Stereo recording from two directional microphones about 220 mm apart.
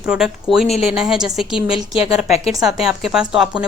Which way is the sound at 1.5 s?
25° left (ahead or behind).